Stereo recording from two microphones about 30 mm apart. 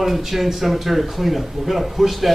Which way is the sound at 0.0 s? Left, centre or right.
Centre.